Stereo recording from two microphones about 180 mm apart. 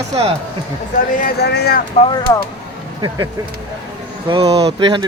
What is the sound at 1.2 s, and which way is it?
Speech, 65° left (ahead or behind).